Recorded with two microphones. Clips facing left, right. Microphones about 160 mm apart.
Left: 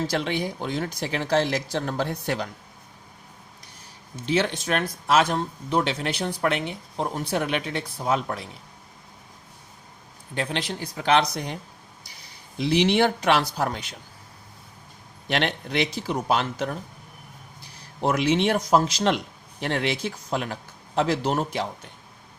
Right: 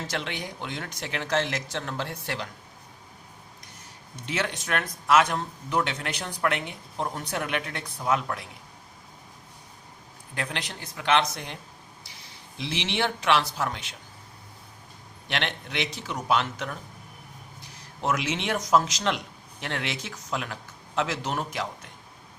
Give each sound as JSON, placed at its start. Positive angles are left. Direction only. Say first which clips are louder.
{"t": 0.1, "sound": "speech", "louder": "left 7 dB", "side_deg": 35}
{"t": 4.1, "sound": "speech", "louder": "left 7 dB", "side_deg": 30}
{"t": 10.3, "sound": "speech", "louder": "left 5 dB", "side_deg": 30}
{"t": 12.5, "sound": "speech", "louder": "left 9 dB", "side_deg": 40}
{"t": 15.3, "sound": "speech", "louder": "left 6 dB", "side_deg": 40}
{"t": 18.0, "sound": "speech", "louder": "left 6 dB", "side_deg": 35}